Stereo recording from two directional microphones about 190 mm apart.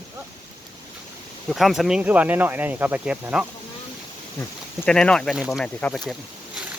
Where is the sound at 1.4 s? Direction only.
Centre (ahead or behind).